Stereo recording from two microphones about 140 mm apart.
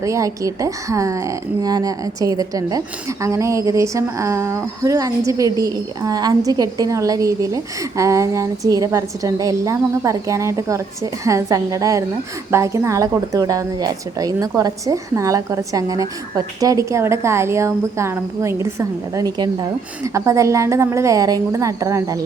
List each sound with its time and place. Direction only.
0.0 s a woman's voice: 25° right (ahead or behind)